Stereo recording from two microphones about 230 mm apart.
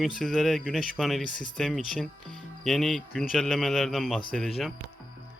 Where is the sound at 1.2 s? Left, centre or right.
Left.